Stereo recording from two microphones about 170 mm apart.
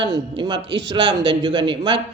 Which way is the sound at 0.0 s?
25° right (ahead or behind).